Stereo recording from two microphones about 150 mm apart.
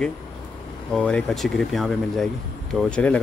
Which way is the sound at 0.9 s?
5° left (ahead or behind).